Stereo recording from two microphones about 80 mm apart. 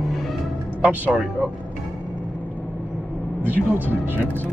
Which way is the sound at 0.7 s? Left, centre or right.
Centre.